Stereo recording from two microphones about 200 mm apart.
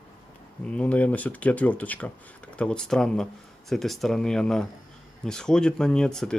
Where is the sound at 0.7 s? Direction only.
5° left (ahead or behind).